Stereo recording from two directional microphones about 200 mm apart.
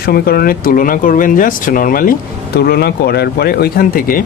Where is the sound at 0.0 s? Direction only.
50° left (ahead or behind).